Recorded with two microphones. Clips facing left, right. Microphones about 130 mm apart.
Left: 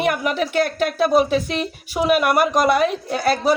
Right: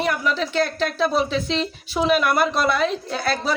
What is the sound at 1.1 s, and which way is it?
Speech, 50° left (ahead or behind).